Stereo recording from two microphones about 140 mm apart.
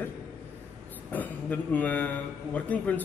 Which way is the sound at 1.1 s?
10° left (ahead or behind).